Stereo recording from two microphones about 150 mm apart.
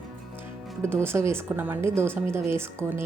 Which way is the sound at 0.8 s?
15° right (ahead or behind).